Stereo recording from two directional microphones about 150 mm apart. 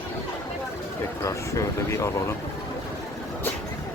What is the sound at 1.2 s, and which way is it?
Speech, 20° left (ahead or behind).